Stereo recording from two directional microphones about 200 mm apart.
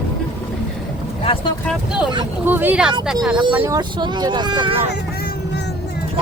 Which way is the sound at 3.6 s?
20° right (ahead or behind).